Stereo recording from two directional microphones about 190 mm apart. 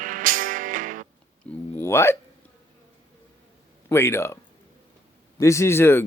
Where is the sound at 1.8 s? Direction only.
15° left (ahead or behind).